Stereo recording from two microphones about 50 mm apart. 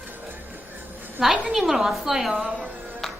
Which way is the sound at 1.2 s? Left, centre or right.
Centre.